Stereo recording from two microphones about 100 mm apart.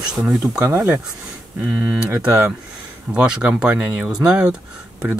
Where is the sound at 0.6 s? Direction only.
35° right (ahead or behind).